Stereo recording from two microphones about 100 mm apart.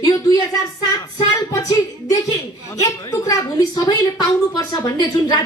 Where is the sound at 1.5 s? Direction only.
35° left (ahead or behind).